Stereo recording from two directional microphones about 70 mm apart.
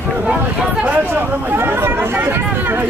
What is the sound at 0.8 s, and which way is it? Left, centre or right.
Speech, right.